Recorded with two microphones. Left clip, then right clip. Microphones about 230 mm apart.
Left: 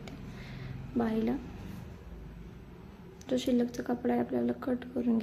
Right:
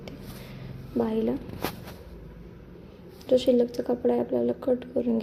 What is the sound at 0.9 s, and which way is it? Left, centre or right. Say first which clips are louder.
Speech: right 5 dB; centre.